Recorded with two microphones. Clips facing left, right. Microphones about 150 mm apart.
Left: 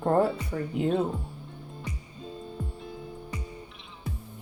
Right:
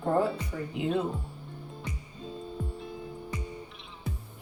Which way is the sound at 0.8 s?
45° left (ahead or behind).